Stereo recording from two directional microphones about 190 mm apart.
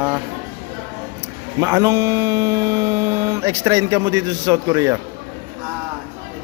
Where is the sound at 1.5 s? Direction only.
20° right (ahead or behind).